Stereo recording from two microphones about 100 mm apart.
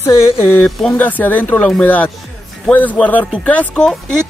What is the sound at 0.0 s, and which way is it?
Speech, 30° left (ahead or behind).